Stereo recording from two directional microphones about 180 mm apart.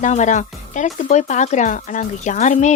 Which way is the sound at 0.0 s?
40° left (ahead or behind).